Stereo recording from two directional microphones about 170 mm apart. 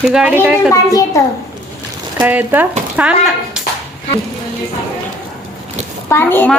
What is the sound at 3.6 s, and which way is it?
Clapping, 5° right (ahead or behind).